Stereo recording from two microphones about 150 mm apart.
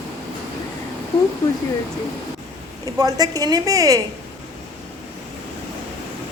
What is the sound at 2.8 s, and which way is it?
A woman's voice, 25° right (ahead or behind).